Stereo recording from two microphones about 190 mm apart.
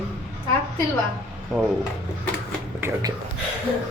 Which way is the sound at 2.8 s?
15° right (ahead or behind).